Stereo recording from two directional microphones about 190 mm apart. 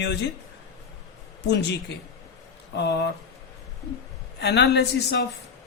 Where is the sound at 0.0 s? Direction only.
65° left (ahead or behind).